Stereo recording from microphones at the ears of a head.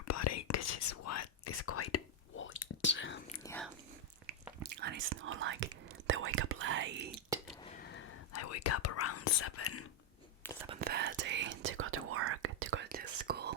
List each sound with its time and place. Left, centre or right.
0.1 s whispering: left
4.6 s whispering: right
7.8 s whispering: left
10.6 s whispering: right